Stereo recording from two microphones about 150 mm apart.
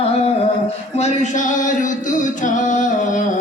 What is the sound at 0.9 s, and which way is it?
Music, 50° left (ahead or behind).